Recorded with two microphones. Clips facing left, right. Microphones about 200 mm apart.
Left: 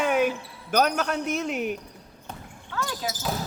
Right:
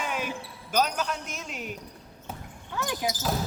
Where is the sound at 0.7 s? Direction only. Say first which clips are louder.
Left 4 dB; 55° left (ahead or behind).